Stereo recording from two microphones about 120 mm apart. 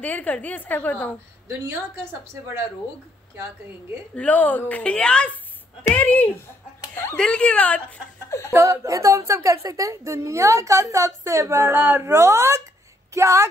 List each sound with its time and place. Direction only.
0.0 s a woman's voice: 10° left (ahead or behind)
2.4 s a woman's voice: 20° right (ahead or behind)
4.1 s a woman's voice: 10° left (ahead or behind)
8.3 s speech: 25° left (ahead or behind)
8.5 s a woman's voice: 25° right (ahead or behind)